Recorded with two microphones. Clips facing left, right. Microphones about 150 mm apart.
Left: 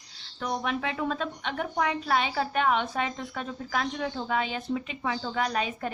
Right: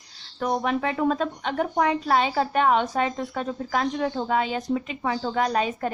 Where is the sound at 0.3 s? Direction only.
40° right (ahead or behind).